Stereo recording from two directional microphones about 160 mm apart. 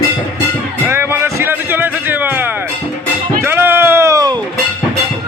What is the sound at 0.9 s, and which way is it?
Music, 15° right (ahead or behind).